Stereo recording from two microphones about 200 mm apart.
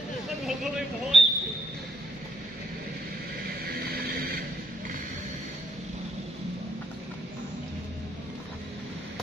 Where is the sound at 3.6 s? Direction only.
50° right (ahead or behind).